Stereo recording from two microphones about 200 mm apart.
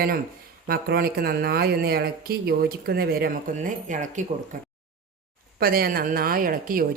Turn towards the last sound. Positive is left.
turn(degrees=-45)  # may be behind; listen again after turning